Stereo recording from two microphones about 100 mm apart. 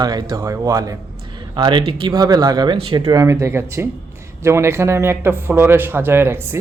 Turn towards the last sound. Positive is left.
turn(degrees=-25)  # may be behind; listen again after turning